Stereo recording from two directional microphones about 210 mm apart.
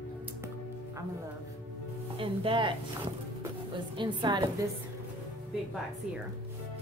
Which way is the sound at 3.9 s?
20° right (ahead or behind).